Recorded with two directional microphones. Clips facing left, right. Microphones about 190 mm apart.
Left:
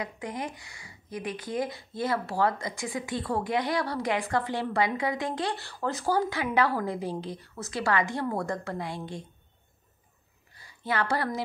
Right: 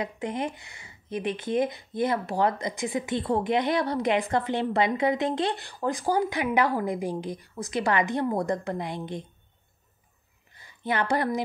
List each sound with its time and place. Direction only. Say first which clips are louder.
0.0 s speech: right 4 dB; 25° right (ahead or behind)
10.5 s a woman's voice: right 2 dB; 20° right (ahead or behind)